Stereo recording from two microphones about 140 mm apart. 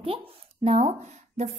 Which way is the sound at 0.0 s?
40° right (ahead or behind).